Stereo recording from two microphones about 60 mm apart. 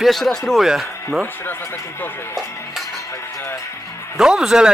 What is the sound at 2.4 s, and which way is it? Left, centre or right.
Music, left.